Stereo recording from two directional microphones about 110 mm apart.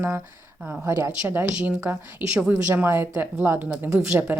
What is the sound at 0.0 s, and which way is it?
Speech, 25° right (ahead or behind).